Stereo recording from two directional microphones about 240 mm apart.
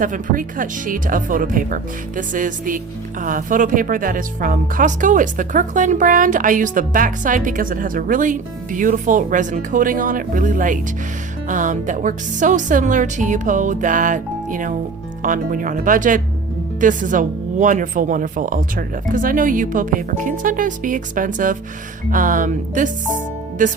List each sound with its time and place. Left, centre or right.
0.0 s speech: right